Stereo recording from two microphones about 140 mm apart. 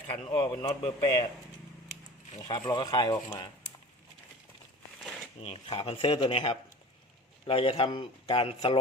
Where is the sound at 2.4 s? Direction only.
30° left (ahead or behind).